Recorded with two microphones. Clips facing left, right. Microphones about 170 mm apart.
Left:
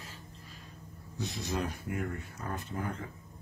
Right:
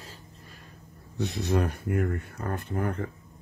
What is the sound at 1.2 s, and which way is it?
Speech, 60° right (ahead or behind).